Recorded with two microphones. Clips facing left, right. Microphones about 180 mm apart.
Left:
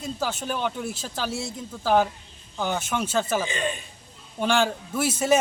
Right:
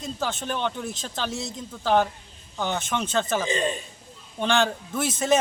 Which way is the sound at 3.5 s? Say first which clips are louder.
Right 3 dB; 35° right (ahead or behind).